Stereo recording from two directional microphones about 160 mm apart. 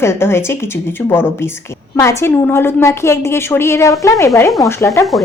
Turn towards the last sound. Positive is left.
turn(degrees=20)  # may be behind; listen again after turning